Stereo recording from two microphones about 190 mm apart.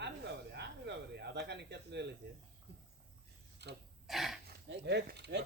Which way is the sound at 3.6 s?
65° right (ahead or behind).